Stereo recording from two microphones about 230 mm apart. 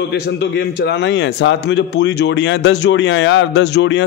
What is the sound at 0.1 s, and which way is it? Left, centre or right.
A man's voice, left.